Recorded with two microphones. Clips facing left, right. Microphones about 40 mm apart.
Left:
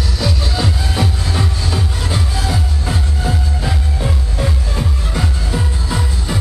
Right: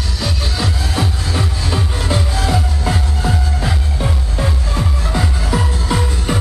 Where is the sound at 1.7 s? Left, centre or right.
Right.